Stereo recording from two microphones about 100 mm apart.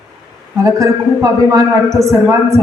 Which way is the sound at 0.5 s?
35° right (ahead or behind).